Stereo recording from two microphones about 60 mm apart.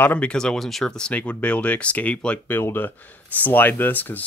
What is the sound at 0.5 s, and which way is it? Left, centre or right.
Speech, centre.